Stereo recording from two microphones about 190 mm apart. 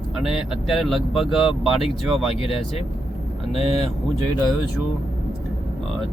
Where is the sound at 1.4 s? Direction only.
30° left (ahead or behind).